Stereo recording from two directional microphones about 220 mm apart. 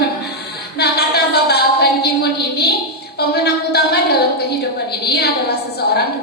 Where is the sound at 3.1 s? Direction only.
45° left (ahead or behind).